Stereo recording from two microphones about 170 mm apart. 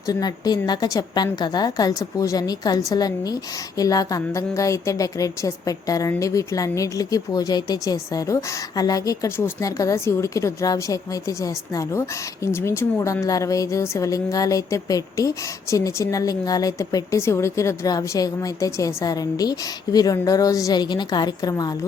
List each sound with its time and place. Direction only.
0.1 s a woman's voice: 25° left (ahead or behind)